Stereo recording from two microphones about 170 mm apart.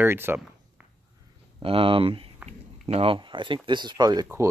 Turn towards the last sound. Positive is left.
turn(degrees=-20)  # may be behind; listen again after turning